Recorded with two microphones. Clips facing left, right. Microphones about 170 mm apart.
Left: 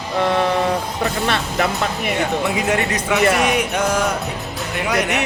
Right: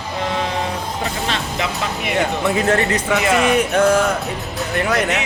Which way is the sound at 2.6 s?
10° left (ahead or behind).